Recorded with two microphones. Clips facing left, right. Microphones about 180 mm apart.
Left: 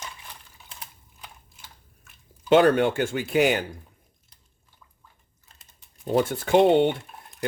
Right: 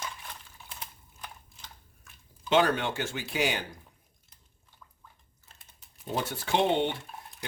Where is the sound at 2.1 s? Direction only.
Centre (ahead or behind).